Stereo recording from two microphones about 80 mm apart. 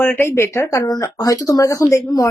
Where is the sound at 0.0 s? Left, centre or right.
Left.